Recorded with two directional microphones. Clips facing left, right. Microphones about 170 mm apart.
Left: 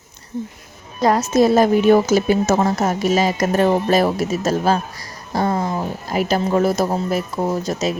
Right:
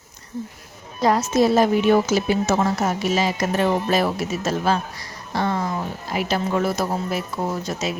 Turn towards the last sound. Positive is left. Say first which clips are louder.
# left 5 dB
turn(degrees=40)  # may be behind; listen again after turning